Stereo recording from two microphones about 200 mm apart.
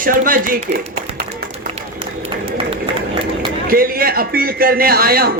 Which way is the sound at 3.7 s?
45° right (ahead or behind).